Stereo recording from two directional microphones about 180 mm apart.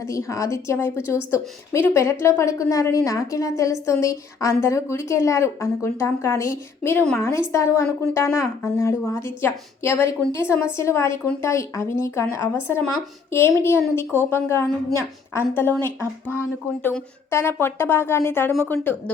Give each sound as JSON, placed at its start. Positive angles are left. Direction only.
{"t": 0.0, "sound": "speech", "side_deg": 15}